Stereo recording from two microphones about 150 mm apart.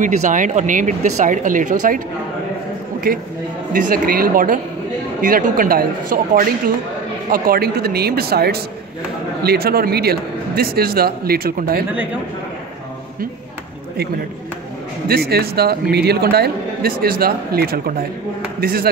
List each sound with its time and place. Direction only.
0.0 s speech: 60° right (ahead or behind)
3.1 s a man's voice: 75° right (ahead or behind)
15.0 s a man's voice: 90° right